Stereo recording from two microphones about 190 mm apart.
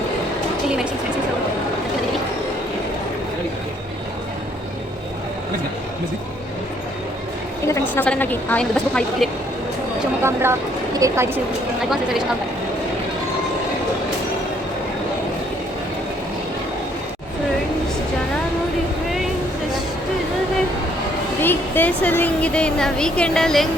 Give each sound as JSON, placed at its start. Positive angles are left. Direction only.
{"t": 7.7, "sound": "a woman's voice", "side_deg": 10}
{"t": 10.2, "sound": "speech", "side_deg": -15}
{"t": 21.4, "sound": "a woman's voice", "side_deg": 10}